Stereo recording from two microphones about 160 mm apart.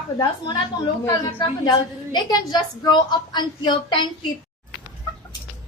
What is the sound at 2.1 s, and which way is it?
A woman's voice, 25° left (ahead or behind).